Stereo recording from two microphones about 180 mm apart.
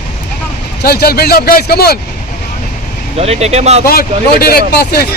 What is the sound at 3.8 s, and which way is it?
A man's voice, 55° left (ahead or behind).